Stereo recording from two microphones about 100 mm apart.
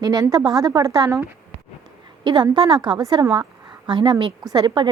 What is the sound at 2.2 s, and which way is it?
A woman's voice, 50° right (ahead or behind).